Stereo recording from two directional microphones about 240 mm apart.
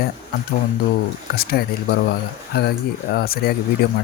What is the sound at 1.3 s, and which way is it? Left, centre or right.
Speech, left.